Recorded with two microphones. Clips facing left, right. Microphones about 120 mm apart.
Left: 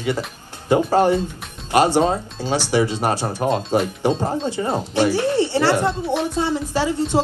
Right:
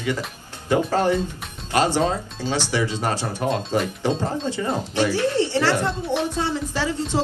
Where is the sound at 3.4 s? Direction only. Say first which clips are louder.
Left 3 dB; 35° left (ahead or behind).